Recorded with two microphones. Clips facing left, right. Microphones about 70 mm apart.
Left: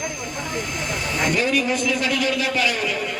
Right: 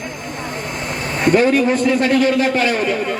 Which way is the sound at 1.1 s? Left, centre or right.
Right.